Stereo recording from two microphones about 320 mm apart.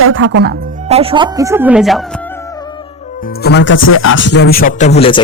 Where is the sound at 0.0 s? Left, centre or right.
Right.